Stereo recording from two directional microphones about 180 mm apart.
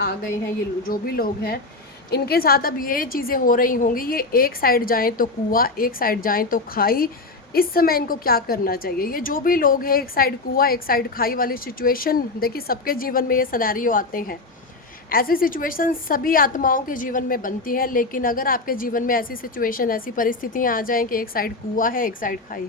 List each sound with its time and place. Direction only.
0.9 s a woman's voice: 55° left (ahead or behind)